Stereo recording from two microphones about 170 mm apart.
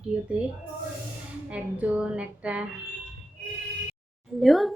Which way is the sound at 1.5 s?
10° right (ahead or behind).